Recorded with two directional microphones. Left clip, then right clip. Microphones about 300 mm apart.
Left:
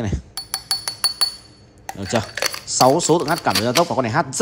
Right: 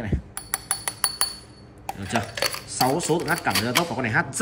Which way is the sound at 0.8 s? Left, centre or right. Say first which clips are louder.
Left 6 dB; centre.